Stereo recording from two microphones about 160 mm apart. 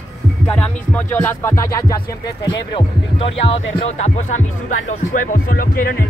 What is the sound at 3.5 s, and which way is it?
Speech, 40° left (ahead or behind).